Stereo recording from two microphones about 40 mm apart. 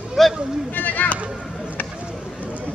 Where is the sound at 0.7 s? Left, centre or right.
Left.